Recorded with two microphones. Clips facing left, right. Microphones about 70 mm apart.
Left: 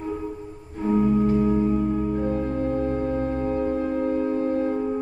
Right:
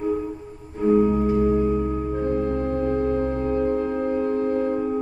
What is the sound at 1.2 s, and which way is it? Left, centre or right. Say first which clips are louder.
Music: right 1 dB; centre.